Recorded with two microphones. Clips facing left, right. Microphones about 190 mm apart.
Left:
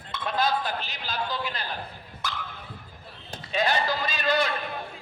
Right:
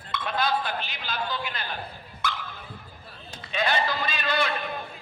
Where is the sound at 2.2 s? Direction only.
40° left (ahead or behind).